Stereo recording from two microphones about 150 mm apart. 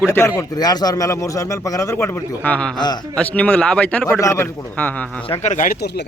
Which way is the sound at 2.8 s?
30° left (ahead or behind).